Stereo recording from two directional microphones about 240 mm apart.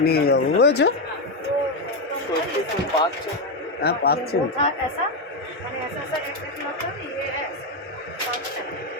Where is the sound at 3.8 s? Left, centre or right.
Left.